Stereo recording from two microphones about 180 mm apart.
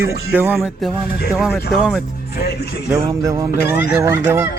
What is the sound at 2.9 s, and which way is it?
Speech, 20° right (ahead or behind).